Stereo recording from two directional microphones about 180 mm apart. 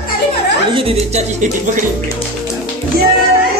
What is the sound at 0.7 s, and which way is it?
Music, 30° right (ahead or behind).